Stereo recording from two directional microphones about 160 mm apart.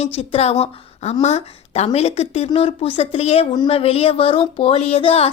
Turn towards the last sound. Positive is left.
turn(degrees=35)  # may be behind; listen again after turning